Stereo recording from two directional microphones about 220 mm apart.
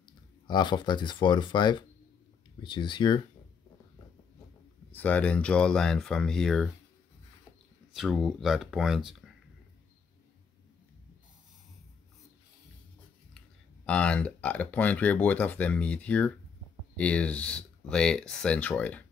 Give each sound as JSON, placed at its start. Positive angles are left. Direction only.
{"t": 0.5, "sound": "speech", "side_deg": 20}
{"t": 4.9, "sound": "speech", "side_deg": 5}
{"t": 7.9, "sound": "speech", "side_deg": 0}
{"t": 13.8, "sound": "speech", "side_deg": 5}